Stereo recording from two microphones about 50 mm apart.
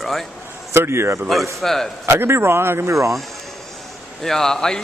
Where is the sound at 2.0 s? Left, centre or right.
Right.